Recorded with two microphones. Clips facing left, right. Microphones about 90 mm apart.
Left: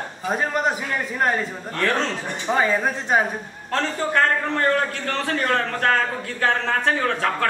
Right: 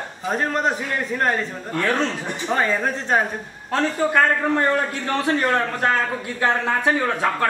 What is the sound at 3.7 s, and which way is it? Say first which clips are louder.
A man's voice: right 3 dB; 10° right (ahead or behind).